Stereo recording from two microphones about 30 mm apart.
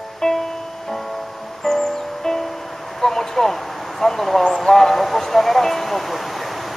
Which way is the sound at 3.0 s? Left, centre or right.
Centre.